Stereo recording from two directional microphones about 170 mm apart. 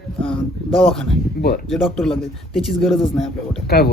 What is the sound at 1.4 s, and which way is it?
Speech, 65° left (ahead or behind).